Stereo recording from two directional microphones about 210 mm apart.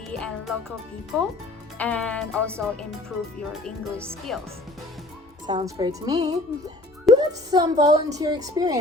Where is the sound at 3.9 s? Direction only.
10° right (ahead or behind).